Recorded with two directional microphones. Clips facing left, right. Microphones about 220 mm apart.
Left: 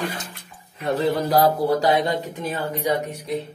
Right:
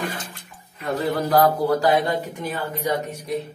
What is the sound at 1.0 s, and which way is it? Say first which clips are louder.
Speech: even; 20° left (ahead or behind).